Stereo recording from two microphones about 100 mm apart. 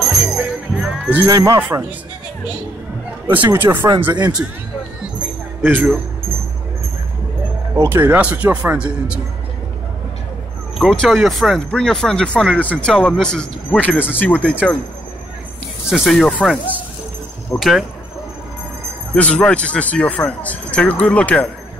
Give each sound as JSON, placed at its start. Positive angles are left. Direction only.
{"t": 0.0, "sound": "music", "side_deg": -5}
{"t": 1.2, "sound": "speech", "side_deg": -35}
{"t": 1.6, "sound": "speech", "side_deg": -15}
{"t": 3.3, "sound": "speech", "side_deg": -20}
{"t": 4.1, "sound": "speech", "side_deg": -45}
{"t": 5.6, "sound": "speech", "side_deg": -20}
{"t": 7.7, "sound": "speech", "side_deg": -25}
{"t": 10.8, "sound": "speech", "side_deg": 5}
{"t": 15.9, "sound": "speech", "side_deg": 0}
{"t": 17.6, "sound": "speech", "side_deg": -5}
{"t": 19.1, "sound": "speech", "side_deg": 15}